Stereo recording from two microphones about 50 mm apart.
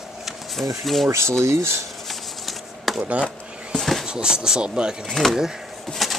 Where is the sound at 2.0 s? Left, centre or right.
Centre.